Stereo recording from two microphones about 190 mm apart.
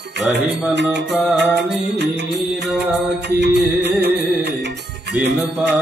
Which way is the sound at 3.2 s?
60° right (ahead or behind).